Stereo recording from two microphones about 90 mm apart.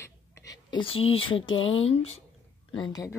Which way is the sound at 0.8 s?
90° left.